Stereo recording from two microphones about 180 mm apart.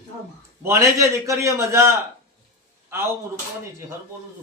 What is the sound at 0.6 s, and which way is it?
Speech, 15° right (ahead or behind).